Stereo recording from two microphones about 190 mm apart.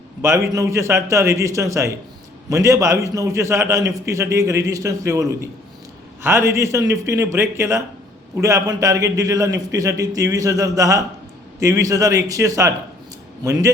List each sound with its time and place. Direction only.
0.2 s a man's voice: 15° right (ahead or behind)